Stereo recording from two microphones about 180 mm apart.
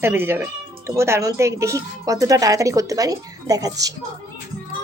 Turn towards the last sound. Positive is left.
turn(degrees=-20)  # may be behind; listen again after turning